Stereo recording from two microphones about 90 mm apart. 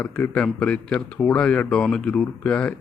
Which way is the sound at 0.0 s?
20° left (ahead or behind).